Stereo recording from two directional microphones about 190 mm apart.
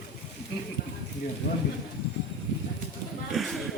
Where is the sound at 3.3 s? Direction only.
Centre (ahead or behind).